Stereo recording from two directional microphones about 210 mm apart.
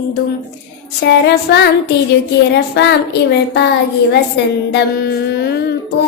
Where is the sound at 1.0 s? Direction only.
55° left (ahead or behind).